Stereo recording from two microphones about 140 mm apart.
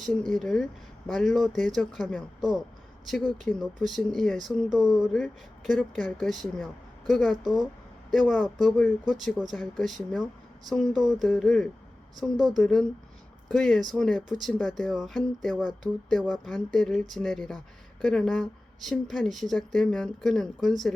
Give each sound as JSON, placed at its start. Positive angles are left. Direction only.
{"t": 0.0, "sound": "speech", "side_deg": 5}
{"t": 2.4, "sound": "a man's voice", "side_deg": -30}
{"t": 3.1, "sound": "speech", "side_deg": 0}